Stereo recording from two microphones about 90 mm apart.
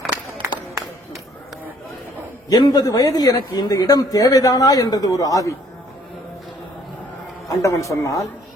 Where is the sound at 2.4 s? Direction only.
45° left (ahead or behind).